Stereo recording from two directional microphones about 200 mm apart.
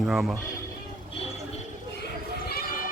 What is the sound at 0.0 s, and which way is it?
Speech, centre (ahead or behind).